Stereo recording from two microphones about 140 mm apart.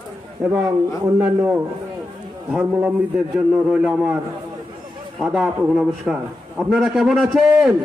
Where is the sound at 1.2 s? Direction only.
10° right (ahead or behind).